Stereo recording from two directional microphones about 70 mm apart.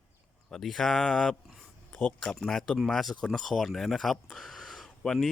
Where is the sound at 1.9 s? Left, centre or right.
Left.